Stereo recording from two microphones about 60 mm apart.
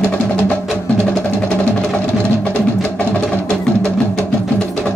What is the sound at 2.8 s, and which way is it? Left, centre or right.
Music, left.